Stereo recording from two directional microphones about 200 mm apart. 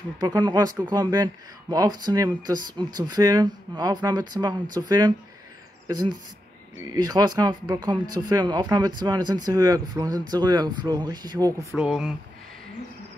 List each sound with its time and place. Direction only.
0.2 s speech: 20° right (ahead or behind)
6.9 s speech: 20° right (ahead or behind)
11.7 s speech: 5° right (ahead or behind)